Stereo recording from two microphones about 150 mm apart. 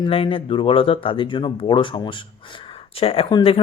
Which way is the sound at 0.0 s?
35° left (ahead or behind).